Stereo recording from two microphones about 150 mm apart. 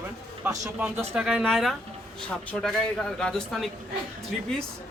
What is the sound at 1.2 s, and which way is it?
A man's voice, centre (ahead or behind).